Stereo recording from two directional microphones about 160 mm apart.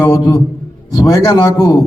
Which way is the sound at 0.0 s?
20° left (ahead or behind).